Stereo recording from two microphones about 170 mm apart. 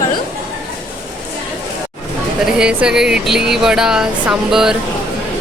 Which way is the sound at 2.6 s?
5° right (ahead or behind).